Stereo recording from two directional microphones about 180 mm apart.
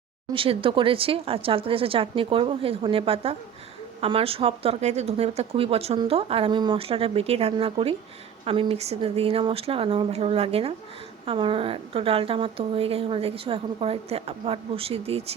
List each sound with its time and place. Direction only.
0.3 s speech: 30° right (ahead or behind)